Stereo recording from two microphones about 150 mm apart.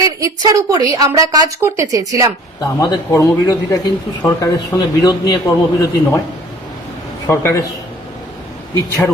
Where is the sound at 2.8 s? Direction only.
20° left (ahead or behind).